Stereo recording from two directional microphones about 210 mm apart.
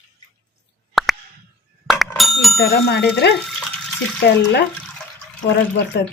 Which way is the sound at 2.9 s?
55° left (ahead or behind).